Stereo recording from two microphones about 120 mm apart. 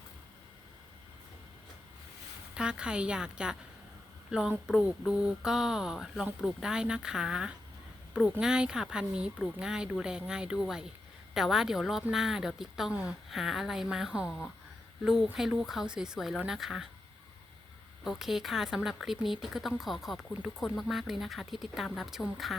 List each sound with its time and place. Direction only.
2.6 s speech: 5° right (ahead or behind)
18.0 s speech: 5° right (ahead or behind)